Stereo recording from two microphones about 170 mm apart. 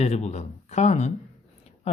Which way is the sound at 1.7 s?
35° left (ahead or behind).